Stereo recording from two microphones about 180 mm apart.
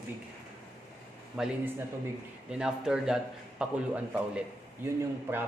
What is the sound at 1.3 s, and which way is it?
A man's voice, 5° right (ahead or behind).